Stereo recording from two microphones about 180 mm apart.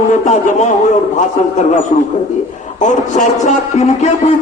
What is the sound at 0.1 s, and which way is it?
A man's voice, 40° left (ahead or behind).